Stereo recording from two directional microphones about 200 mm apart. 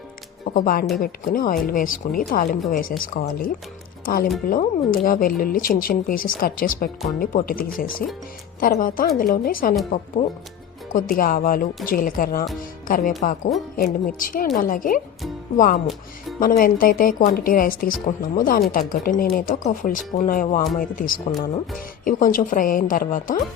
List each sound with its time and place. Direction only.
0.4 s speech: 45° left (ahead or behind)
10.9 s speech: 45° left (ahead or behind)